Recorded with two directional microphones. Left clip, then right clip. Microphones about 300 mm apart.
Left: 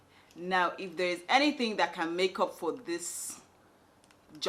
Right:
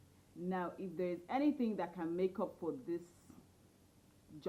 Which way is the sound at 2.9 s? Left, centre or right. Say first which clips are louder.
Left 7 dB; centre.